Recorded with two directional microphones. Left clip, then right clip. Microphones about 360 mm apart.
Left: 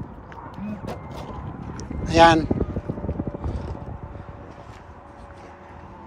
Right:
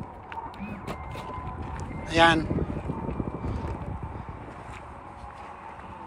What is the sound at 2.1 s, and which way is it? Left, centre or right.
Speech, centre.